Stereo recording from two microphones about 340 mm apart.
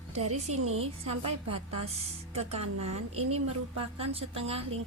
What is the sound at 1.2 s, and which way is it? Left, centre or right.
Speech, right.